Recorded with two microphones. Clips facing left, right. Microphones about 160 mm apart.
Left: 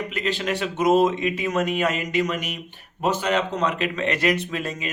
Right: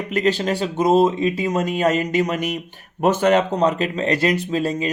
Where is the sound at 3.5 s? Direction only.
35° right (ahead or behind).